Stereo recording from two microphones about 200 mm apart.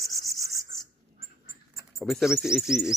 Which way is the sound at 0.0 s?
50° right (ahead or behind).